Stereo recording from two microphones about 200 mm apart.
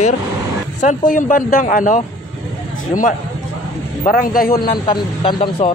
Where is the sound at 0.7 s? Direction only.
40° left (ahead or behind).